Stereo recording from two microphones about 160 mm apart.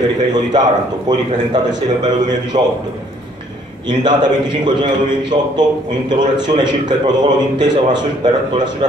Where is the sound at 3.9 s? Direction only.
25° right (ahead or behind).